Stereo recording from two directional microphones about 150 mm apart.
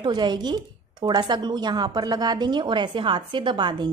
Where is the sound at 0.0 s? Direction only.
30° right (ahead or behind).